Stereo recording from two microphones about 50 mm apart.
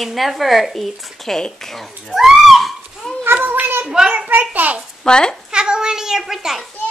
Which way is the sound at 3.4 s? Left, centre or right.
Right.